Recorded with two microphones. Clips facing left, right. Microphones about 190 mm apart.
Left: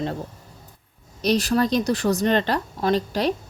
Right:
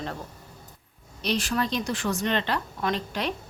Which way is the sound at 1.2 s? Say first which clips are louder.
Left 7 dB; 40° left (ahead or behind).